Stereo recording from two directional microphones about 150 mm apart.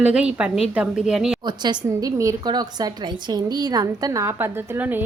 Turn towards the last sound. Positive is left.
turn(degrees=-15)  # may be behind; listen again after turning